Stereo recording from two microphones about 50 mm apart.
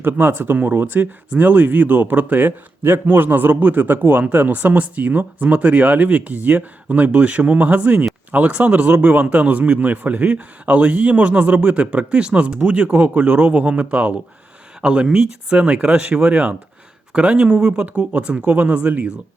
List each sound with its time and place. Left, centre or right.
0.0 s a man's voice: right